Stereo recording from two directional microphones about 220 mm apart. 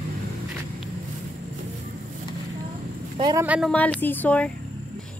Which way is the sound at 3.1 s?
20° right (ahead or behind).